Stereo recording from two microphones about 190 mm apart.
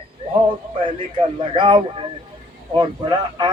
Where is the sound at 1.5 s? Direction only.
25° right (ahead or behind).